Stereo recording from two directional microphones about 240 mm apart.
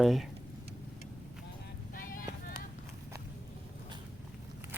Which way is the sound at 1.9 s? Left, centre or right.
Left.